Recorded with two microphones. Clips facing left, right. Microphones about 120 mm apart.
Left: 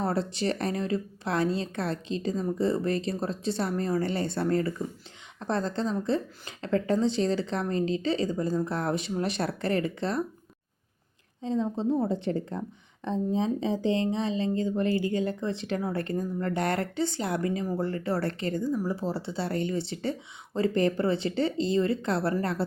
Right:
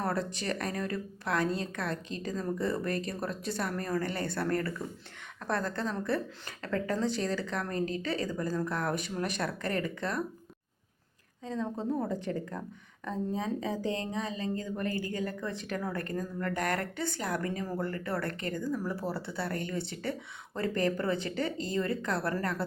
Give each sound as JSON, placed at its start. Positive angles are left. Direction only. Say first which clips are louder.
{"t": 0.0, "sound": "speech", "louder": "left 5 dB", "side_deg": 30}
{"t": 11.4, "sound": "speech", "louder": "left 6 dB", "side_deg": 30}
{"t": 18.6, "sound": "speech", "louder": "left 3 dB", "side_deg": 15}